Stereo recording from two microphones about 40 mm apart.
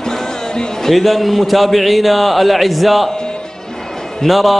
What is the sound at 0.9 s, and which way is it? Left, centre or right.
A man's voice, centre.